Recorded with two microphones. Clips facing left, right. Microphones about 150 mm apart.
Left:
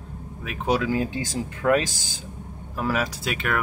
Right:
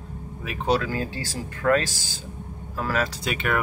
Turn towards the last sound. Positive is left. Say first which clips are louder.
# right 1 dB
turn(degrees=0)  # may be behind; listen again after turning